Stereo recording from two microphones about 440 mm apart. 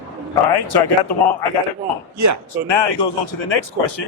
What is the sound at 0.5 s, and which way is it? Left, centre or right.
Speech, left.